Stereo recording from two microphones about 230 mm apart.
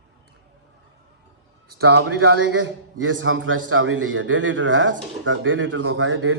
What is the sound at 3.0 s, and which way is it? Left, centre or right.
A man's voice, right.